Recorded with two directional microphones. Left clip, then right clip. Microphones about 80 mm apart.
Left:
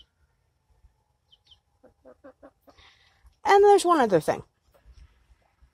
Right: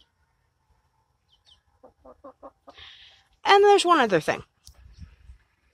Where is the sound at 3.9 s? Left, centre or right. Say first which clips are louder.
Right 1 dB; centre.